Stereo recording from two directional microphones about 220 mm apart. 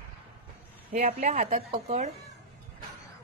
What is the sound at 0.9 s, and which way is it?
A woman's voice, 25° right (ahead or behind).